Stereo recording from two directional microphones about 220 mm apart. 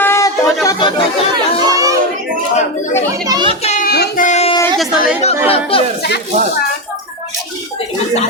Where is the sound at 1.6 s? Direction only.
15° right (ahead or behind).